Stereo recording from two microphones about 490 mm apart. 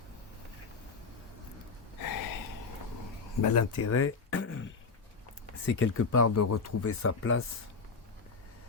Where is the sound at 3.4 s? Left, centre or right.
Left.